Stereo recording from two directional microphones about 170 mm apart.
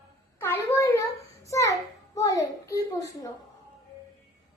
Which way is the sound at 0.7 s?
15° left (ahead or behind).